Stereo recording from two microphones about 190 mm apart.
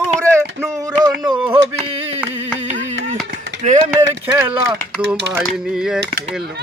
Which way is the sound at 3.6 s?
40° right (ahead or behind).